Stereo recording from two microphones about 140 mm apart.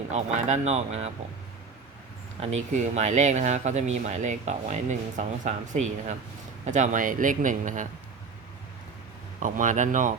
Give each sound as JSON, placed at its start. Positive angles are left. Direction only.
{"t": 0.1, "sound": "speech", "side_deg": -55}
{"t": 2.4, "sound": "a man's voice", "side_deg": -55}
{"t": 9.4, "sound": "speech", "side_deg": -65}